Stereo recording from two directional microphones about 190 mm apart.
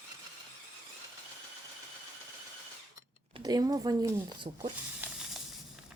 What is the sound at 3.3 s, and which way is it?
A woman's voice, 20° right (ahead or behind).